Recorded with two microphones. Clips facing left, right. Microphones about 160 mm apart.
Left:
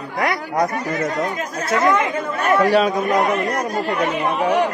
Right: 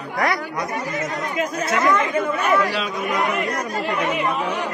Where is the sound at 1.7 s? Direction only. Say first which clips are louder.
Left 3 dB; 25° left (ahead or behind).